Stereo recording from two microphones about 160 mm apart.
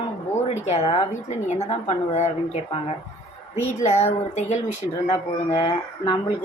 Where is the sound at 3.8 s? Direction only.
45° left (ahead or behind).